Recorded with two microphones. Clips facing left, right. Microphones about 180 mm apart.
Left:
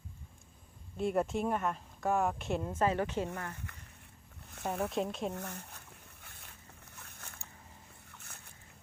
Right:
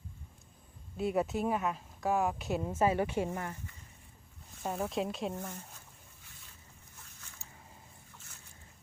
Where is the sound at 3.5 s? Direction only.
65° left (ahead or behind).